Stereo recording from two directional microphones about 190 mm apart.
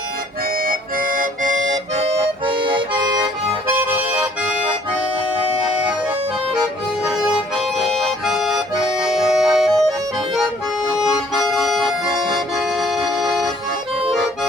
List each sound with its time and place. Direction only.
0.6 s music: 45° right (ahead or behind)
2.0 s music: 30° right (ahead or behind)
3.8 s music: 5° right (ahead or behind)
7.0 s harmonica: 5° right (ahead or behind)
7.9 s accordion: centre (ahead or behind)
11.0 s accordion: centre (ahead or behind)
12.7 s music: centre (ahead or behind)